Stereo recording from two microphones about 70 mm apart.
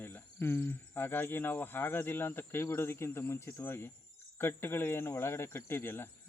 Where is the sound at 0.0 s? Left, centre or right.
Left.